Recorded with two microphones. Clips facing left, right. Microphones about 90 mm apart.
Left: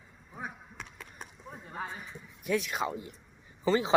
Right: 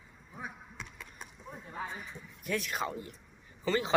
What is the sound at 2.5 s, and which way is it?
A man's voice, 15° left (ahead or behind).